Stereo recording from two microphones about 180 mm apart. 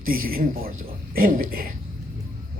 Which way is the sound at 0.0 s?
55° right (ahead or behind).